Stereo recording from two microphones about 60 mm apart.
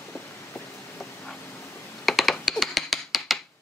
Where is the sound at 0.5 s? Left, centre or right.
Centre.